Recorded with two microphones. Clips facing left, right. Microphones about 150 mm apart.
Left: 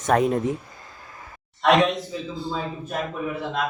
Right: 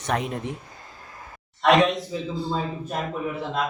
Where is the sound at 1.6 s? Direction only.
Centre (ahead or behind).